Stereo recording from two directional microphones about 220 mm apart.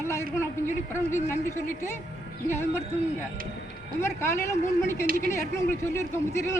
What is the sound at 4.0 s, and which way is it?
Speech, 10° left (ahead or behind).